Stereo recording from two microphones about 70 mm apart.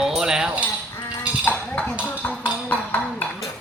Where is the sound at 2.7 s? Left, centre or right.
Left.